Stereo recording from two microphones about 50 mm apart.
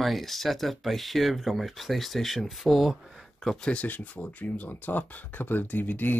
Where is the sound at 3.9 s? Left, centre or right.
Left.